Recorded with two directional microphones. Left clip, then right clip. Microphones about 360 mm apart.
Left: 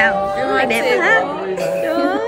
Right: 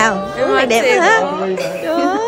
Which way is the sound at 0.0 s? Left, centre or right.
Centre.